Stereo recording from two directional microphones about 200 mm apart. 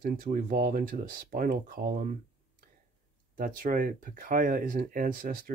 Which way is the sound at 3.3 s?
45° right (ahead or behind).